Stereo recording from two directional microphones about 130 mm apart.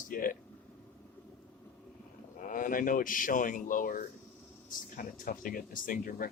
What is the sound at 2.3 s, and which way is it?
Speech, 90° left.